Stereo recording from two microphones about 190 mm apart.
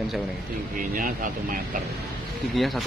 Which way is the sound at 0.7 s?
45° right (ahead or behind).